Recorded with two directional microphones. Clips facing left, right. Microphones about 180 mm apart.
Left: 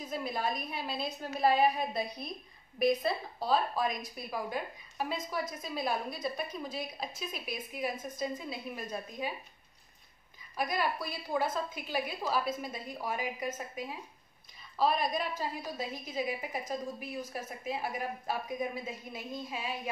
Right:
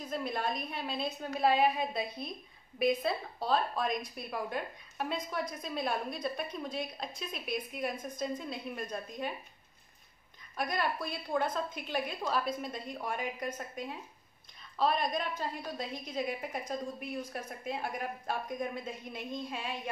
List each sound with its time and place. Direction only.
0.0 s a woman's voice: 5° left (ahead or behind)
10.5 s a woman's voice: 5° left (ahead or behind)